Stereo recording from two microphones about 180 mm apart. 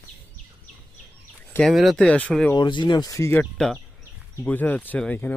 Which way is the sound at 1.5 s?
5° left (ahead or behind).